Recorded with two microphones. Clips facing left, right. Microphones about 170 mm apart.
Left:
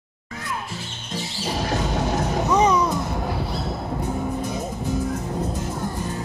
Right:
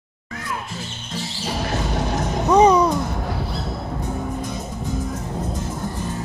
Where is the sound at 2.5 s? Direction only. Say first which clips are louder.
Right 6 dB; 35° right (ahead or behind).